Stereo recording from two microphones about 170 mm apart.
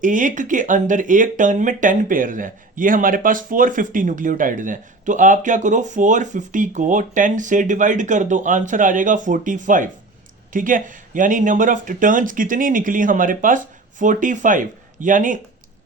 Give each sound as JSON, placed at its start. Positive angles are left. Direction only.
{"t": 0.0, "sound": "speech", "side_deg": -50}